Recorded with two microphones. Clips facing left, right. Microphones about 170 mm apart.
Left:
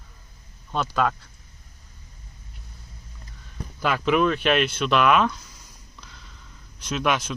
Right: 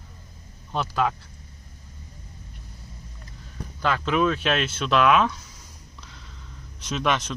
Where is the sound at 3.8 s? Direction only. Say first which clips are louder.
Left 1 dB; 10° left (ahead or behind).